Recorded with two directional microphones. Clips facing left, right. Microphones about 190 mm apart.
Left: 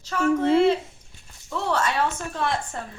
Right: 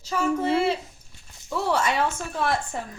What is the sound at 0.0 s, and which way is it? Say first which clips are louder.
Speech: left 3 dB; 10° right (ahead or behind).